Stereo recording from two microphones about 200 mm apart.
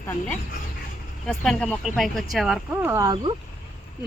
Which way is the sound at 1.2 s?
Centre (ahead or behind).